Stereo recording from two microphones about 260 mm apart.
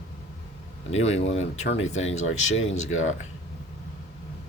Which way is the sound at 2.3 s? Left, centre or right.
Left.